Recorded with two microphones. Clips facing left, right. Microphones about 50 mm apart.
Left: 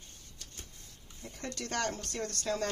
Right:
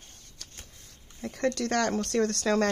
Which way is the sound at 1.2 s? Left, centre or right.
Right.